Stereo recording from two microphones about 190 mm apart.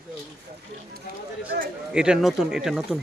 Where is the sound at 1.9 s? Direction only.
5° right (ahead or behind).